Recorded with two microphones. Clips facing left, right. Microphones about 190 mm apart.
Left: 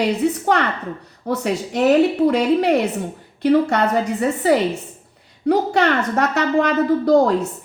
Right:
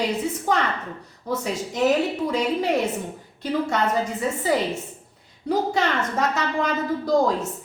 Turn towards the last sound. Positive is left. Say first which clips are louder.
# left 6 dB
turn(degrees=65)  # may be behind; listen again after turning